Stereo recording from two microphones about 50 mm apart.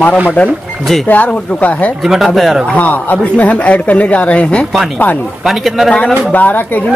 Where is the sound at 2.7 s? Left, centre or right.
Left.